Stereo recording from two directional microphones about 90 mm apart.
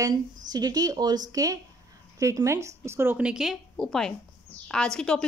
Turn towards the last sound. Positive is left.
turn(degrees=10)  # may be behind; listen again after turning